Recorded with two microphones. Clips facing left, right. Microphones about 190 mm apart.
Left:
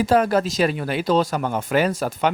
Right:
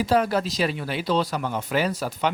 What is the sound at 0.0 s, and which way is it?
Speech, 50° left (ahead or behind).